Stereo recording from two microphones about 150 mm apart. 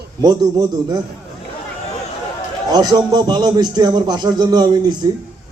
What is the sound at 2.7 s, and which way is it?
A man's voice, 25° right (ahead or behind).